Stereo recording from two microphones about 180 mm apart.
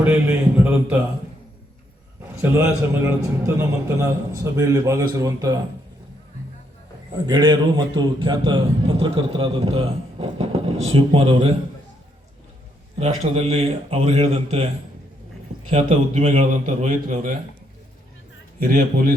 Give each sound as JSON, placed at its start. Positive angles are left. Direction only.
{"t": 0.0, "sound": "a man's voice", "side_deg": -10}
{"t": 2.4, "sound": "a man's voice", "side_deg": -15}
{"t": 7.3, "sound": "a man's voice", "side_deg": -25}
{"t": 13.0, "sound": "a man's voice", "side_deg": -35}
{"t": 15.7, "sound": "a man's voice", "side_deg": -40}
{"t": 18.7, "sound": "a man's voice", "side_deg": -55}